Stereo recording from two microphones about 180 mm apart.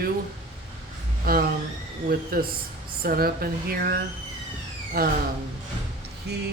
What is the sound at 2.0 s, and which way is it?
Speech, 55° right (ahead or behind).